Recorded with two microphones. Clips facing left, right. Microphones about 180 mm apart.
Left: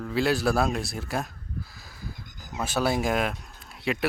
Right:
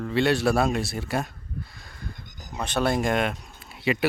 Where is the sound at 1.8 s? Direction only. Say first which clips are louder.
Even; centre (ahead or behind).